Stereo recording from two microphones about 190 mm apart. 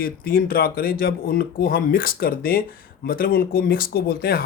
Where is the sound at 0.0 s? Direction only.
50° left (ahead or behind).